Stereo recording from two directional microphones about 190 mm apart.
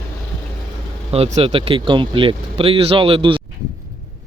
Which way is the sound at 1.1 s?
30° right (ahead or behind).